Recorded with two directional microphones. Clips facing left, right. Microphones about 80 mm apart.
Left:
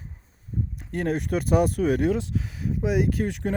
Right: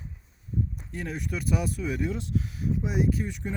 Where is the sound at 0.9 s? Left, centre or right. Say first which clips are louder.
Left 12 dB; left.